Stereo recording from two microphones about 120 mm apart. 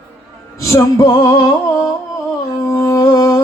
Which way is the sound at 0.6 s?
25° left (ahead or behind).